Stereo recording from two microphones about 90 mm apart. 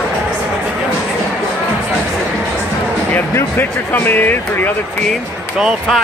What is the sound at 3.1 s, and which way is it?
Speech, 20° left (ahead or behind).